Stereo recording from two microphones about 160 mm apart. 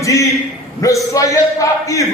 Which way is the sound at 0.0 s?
20° left (ahead or behind).